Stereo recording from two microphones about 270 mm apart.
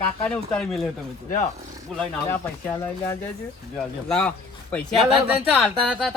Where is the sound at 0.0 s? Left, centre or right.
Centre.